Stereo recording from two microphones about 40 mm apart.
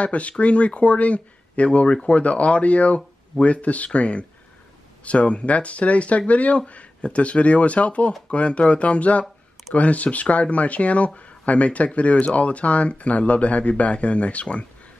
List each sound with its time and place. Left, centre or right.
0.0 s speech: left